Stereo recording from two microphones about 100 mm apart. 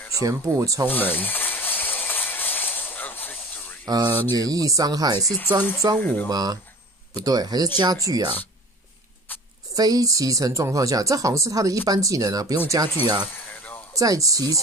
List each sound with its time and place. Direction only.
0.2 s speech: 30° right (ahead or behind)
0.8 s steam: 20° left (ahead or behind)
3.8 s speech: 40° right (ahead or behind)
5.9 s speech: 15° left (ahead or behind)
6.2 s speech: 40° right (ahead or behind)
9.8 s speech: 35° right (ahead or behind)